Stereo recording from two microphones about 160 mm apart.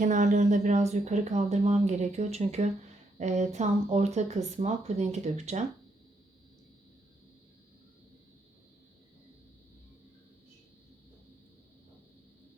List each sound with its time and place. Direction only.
0.0 s speech: 50° right (ahead or behind)